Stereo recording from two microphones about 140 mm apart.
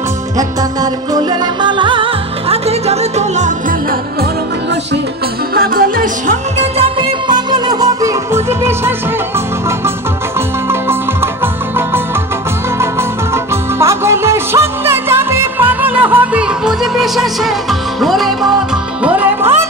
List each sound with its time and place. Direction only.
1.1 s music: 30° right (ahead or behind)
2.5 s music: 50° right (ahead or behind)
5.5 s music: 90° right
6.8 s music: 30° right (ahead or behind)
13.3 s music: 20° right (ahead or behind); by 18.5 s centre (ahead or behind)
19.0 s music: 10° right (ahead or behind)